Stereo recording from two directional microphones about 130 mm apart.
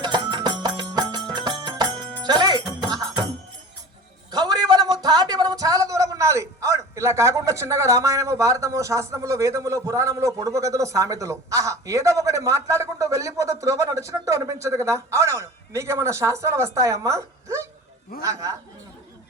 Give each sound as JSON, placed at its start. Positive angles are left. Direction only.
{"t": 0.0, "sound": "music", "side_deg": -35}
{"t": 4.3, "sound": "a woman's voice", "side_deg": -30}